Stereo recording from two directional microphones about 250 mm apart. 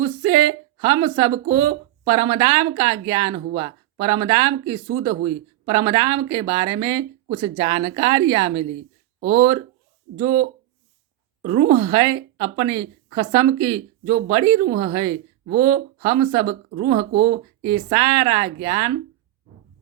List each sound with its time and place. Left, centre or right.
0.0 s a sound: centre
0.8 s a woman's voice: centre
11.4 s a woman's voice: right